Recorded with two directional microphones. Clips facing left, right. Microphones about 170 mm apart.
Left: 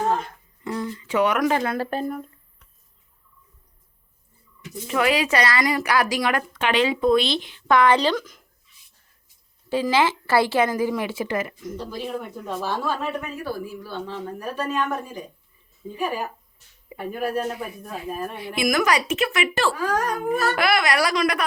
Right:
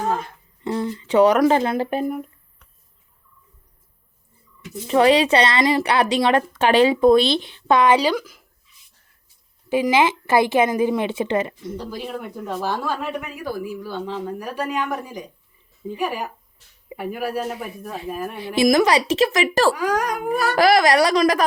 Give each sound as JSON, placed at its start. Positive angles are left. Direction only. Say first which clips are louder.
{"t": 0.6, "sound": "speech", "louder": "right 4 dB", "side_deg": -30}
{"t": 4.9, "sound": "speech", "louder": "right 6 dB", "side_deg": -30}
{"t": 7.9, "sound": "a woman's voice", "louder": "right 2 dB", "side_deg": -10}
{"t": 9.6, "sound": "speech", "louder": "right 3 dB", "side_deg": -15}
{"t": 12.6, "sound": "a woman's voice", "louder": "even", "side_deg": -10}
{"t": 18.3, "sound": "speech", "louder": "right 7 dB", "side_deg": -30}
{"t": 19.7, "sound": "a woman's voice", "louder": "right 2 dB", "side_deg": -15}
{"t": 20.6, "sound": "speech", "louder": "right 11 dB", "side_deg": -35}